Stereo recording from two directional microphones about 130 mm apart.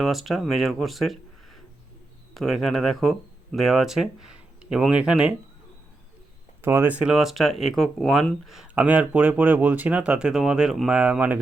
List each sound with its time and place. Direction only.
0.0 s speech: centre (ahead or behind)
2.3 s speech: centre (ahead or behind)
6.6 s speech: 20° right (ahead or behind); by 8.7 s centre (ahead or behind)
8.7 s speech: 10° right (ahead or behind)